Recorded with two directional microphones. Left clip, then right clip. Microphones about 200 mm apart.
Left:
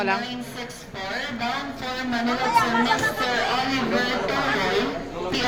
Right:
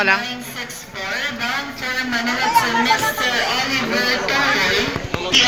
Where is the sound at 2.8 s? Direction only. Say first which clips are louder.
Right 5 dB; 25° left (ahead or behind).